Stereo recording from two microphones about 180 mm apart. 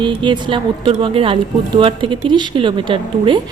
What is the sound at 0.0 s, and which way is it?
Speech, 25° right (ahead or behind).